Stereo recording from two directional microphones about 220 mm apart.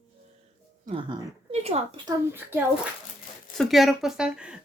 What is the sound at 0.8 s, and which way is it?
Speech, 25° right (ahead or behind).